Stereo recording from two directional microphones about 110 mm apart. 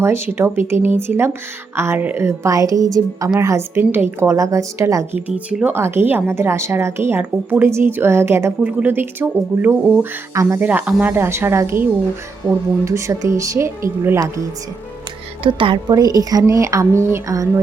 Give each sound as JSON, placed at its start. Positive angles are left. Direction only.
{"t": 0.0, "sound": "speech", "side_deg": -25}
{"t": 5.1, "sound": "speech", "side_deg": -15}
{"t": 10.3, "sound": "speech", "side_deg": -30}
{"t": 10.6, "sound": "speech", "side_deg": -15}
{"t": 15.4, "sound": "a woman's voice", "side_deg": -50}